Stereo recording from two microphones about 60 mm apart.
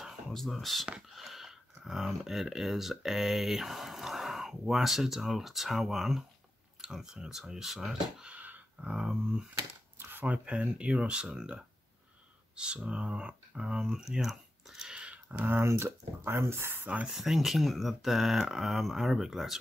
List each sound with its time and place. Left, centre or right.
0.0 s a sound: centre
0.9 s speech: centre
8.3 s dog: right
8.9 s speech: centre
9.9 s speech: right; by 15.1 s centre
15.3 s speech: right
16.8 s speech: right
17.2 s speech: centre